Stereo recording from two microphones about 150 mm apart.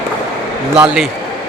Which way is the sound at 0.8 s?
5° right (ahead or behind).